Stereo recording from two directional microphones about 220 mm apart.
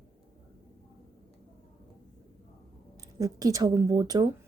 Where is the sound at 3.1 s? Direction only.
15° right (ahead or behind).